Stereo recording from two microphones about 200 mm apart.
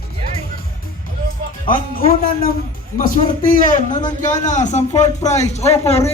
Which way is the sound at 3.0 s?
40° left (ahead or behind).